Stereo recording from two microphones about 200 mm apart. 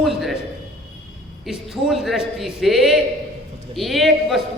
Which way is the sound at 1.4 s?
Centre (ahead or behind).